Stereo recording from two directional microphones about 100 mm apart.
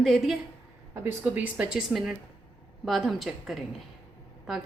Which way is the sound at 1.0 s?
15° right (ahead or behind).